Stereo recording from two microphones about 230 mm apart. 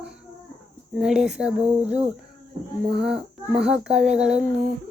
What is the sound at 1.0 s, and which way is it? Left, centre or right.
Speech, centre.